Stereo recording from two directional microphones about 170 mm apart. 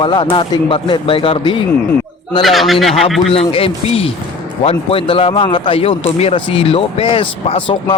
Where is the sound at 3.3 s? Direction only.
35° left (ahead or behind).